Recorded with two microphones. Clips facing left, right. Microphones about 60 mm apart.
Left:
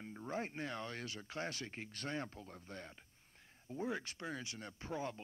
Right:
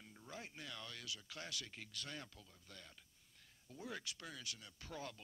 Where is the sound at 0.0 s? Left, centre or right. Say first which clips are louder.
Left 11 dB; left.